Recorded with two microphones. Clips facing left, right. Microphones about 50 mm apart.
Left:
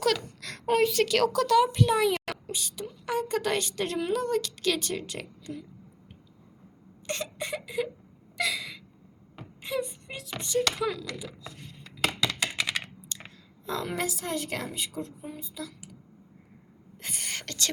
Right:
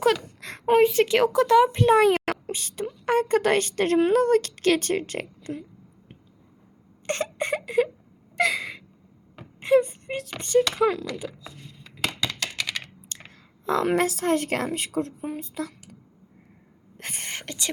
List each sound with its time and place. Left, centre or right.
0.4 s a woman's voice: right
7.1 s a sound: right
8.4 s gasp: right
9.6 s a sound: right
10.8 s speech: right
11.3 s a sound: centre
12.4 s computer keyboard: centre
13.1 s chewing: right
13.7 s a woman's voice: right
17.0 s whispering: right
17.3 s whispering: centre